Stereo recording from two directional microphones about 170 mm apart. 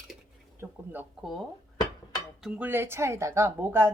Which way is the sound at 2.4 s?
10° right (ahead or behind).